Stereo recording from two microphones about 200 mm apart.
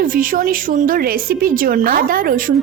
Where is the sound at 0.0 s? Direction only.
45° right (ahead or behind).